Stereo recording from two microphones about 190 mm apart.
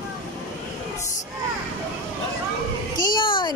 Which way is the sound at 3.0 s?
25° left (ahead or behind).